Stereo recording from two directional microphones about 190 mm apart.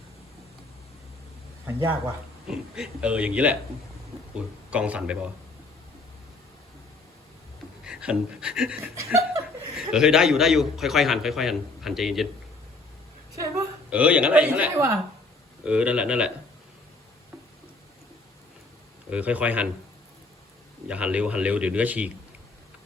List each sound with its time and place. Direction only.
1.6 s a man's voice: 15° right (ahead or behind)
2.5 s a man's voice: 5° right (ahead or behind)
4.7 s a man's voice: 5° right (ahead or behind)
7.9 s a man's voice: 5° right (ahead or behind)
13.4 s a woman's voice: 10° right (ahead or behind)
19.1 s a man's voice: 5° right (ahead or behind)
20.8 s a man's voice: 5° right (ahead or behind)